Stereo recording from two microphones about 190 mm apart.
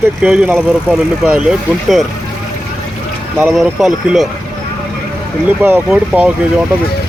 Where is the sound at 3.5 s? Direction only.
Centre (ahead or behind).